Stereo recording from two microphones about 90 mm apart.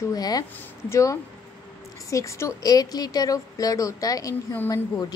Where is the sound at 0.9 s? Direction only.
35° left (ahead or behind).